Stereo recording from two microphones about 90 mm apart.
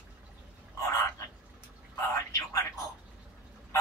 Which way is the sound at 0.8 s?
35° left (ahead or behind).